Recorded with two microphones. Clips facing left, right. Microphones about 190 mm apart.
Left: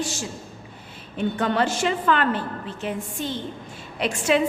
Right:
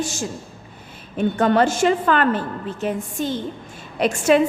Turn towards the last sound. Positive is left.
turn(degrees=-45)  # may be behind; listen again after turning